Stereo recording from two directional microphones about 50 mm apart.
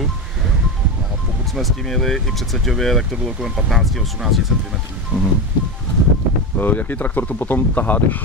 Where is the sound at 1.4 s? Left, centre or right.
Centre.